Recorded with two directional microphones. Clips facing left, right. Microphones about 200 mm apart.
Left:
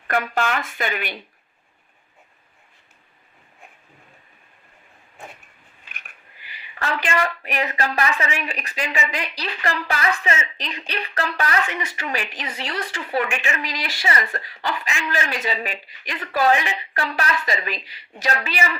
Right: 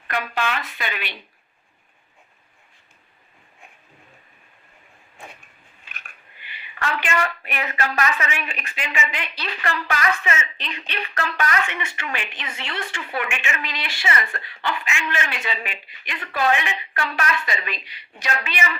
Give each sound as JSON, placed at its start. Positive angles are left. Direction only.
{"t": 0.1, "sound": "speech", "side_deg": 45}
{"t": 6.5, "sound": "a woman's voice", "side_deg": 35}